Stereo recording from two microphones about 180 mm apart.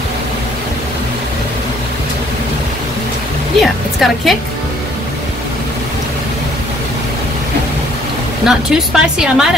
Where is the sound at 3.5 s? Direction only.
Centre (ahead or behind).